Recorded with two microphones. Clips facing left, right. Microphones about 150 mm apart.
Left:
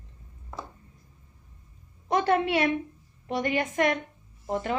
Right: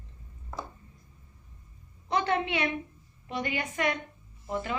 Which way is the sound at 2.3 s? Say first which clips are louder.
Left 5 dB; 50° left (ahead or behind).